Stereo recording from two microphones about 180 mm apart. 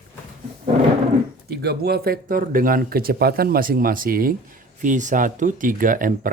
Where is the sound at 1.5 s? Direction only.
65° right (ahead or behind).